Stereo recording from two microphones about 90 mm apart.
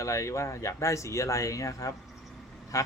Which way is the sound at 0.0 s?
35° left (ahead or behind).